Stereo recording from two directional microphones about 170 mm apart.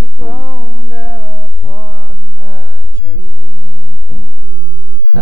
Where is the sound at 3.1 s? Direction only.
20° right (ahead or behind).